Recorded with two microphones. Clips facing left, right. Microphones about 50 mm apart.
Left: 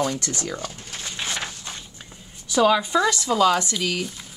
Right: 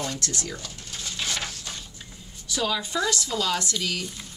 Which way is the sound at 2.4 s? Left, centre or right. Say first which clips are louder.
Left 9 dB; left.